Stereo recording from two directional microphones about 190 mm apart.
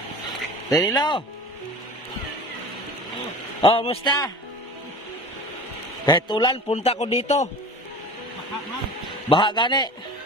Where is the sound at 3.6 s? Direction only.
30° left (ahead or behind).